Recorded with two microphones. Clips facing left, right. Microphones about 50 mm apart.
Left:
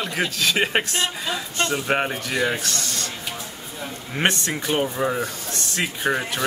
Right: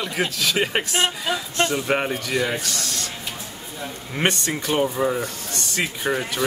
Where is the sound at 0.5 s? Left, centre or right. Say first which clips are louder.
Left 1 dB; centre.